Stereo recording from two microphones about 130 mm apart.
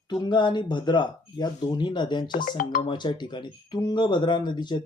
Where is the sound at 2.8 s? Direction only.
35° left (ahead or behind).